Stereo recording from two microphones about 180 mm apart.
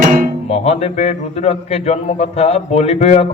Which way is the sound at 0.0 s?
50° right (ahead or behind).